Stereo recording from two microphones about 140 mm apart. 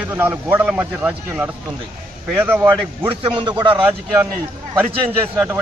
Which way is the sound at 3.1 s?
40° right (ahead or behind).